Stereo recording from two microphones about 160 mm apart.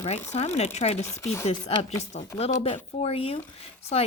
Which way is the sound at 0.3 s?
40° left (ahead or behind).